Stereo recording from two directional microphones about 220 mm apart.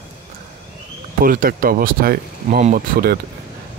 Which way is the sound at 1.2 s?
40° right (ahead or behind).